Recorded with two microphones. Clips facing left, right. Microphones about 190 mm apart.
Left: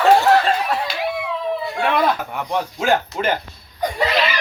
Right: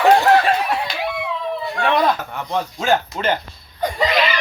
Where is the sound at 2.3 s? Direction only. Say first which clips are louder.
Even; 10° left (ahead or behind).